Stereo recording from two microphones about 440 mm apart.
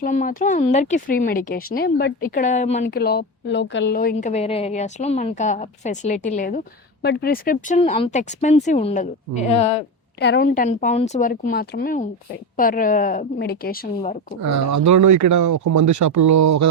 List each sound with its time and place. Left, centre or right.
0.0 s a woman's voice: centre
14.4 s speech: right